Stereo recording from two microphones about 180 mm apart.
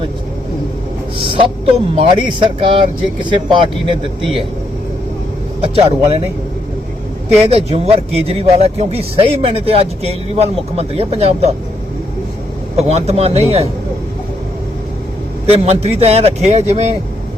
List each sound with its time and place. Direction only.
2.0 s speech: 25° right (ahead or behind)
5.5 s speech: 35° right (ahead or behind)
7.3 s speech: 35° right (ahead or behind)
12.7 s speech: 35° right (ahead or behind)
15.4 s speech: 35° right (ahead or behind)